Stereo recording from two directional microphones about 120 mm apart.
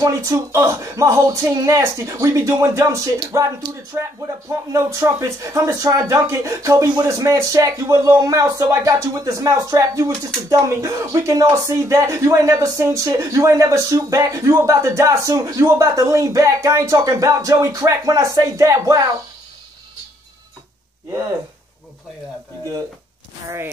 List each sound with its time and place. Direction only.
0.0 s speech: 25° right (ahead or behind)